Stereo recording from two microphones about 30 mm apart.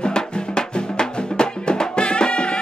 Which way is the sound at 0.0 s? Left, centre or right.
Left.